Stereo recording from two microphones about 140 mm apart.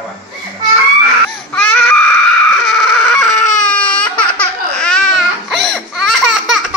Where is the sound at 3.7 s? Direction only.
10° left (ahead or behind).